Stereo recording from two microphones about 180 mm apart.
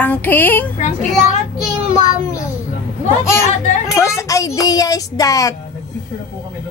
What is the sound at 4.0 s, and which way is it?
Music, 15° left (ahead or behind).